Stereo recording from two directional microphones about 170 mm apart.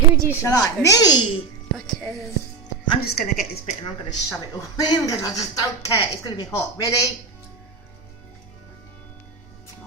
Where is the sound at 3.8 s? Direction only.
25° left (ahead or behind).